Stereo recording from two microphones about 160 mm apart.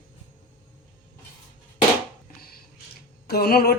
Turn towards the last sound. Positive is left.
turn(degrees=70)  # may be behind; listen again after turning